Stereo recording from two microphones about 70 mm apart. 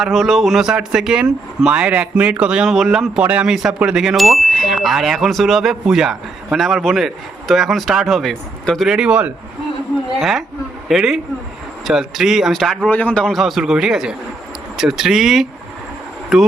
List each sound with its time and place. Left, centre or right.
0.0 s speech: centre
2.6 s chime: centre
3.2 s speech: right
3.4 s chime: centre
8.9 s speech: centre
10.2 s chime: centre
12.9 s a man's voice: left
13.2 s speech: centre
14.8 s chime: centre